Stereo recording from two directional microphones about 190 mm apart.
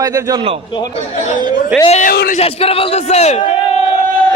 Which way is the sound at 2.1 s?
50° left (ahead or behind).